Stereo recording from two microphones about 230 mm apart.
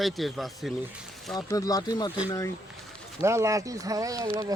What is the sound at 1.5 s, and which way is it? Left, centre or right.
Speech, centre.